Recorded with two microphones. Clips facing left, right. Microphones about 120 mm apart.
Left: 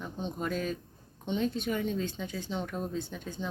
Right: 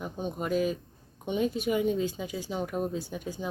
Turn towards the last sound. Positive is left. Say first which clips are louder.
# right 2 dB
turn(degrees=-10)  # may be behind; listen again after turning